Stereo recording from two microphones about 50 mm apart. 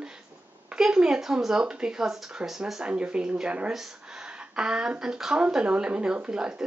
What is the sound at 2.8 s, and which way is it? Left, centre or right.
Speech, right.